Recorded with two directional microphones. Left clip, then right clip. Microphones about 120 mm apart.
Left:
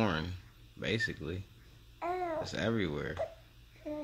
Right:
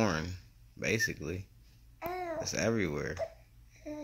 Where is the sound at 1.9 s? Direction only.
45° left (ahead or behind).